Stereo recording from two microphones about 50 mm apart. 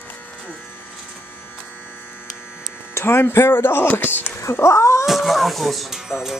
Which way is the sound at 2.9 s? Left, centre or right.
Left.